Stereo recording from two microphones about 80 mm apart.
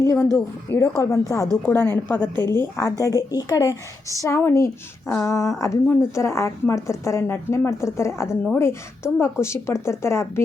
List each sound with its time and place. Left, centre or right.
0.0 s a woman's voice: left
1.6 s a woman's voice: left
2.3 s a woman's voice: right
2.6 s a woman's voice: left
3.0 s a woman's voice: left